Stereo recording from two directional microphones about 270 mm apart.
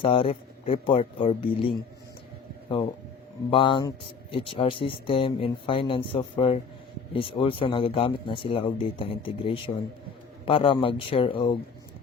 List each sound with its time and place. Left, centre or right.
0.0 s speech: centre
3.5 s speech: centre